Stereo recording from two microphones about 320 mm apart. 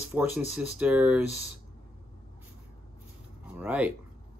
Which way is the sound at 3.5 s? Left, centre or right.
Centre.